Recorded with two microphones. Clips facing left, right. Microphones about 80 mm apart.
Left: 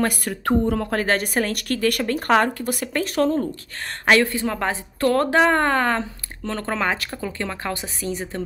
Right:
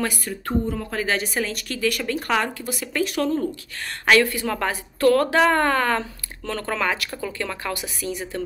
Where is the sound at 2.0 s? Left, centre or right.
Left.